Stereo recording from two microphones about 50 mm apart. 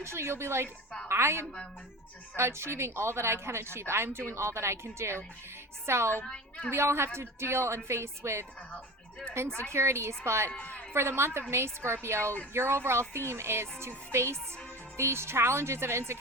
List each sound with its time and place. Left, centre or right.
0.0 s speech: right
6.2 s a woman's voice: centre
6.7 s speech: right
9.6 s speech: right
10.6 s a man's voice: left
10.9 s speech: right